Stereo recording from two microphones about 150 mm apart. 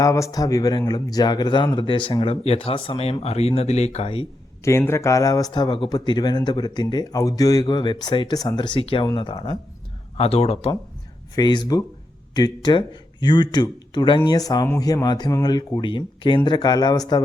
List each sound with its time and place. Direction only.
0.0 s speech: 20° left (ahead or behind); by 4.3 s 40° left (ahead or behind)
4.9 s speech: 20° left (ahead or behind)
10.2 s speech: 45° left (ahead or behind)
11.3 s speech: 30° left (ahead or behind)